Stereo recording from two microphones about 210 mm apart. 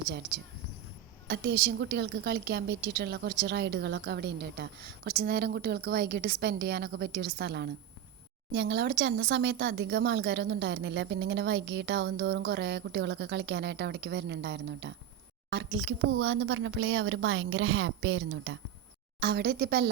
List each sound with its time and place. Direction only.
1.3 s a woman's voice: 55° right (ahead or behind)
19.2 s a woman's voice: 55° right (ahead or behind)